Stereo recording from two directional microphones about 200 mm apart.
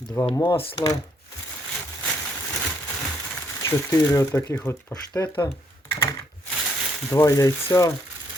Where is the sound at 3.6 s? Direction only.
15° left (ahead or behind).